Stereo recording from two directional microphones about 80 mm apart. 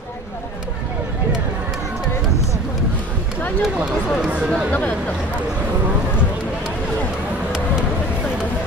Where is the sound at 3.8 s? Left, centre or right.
Centre.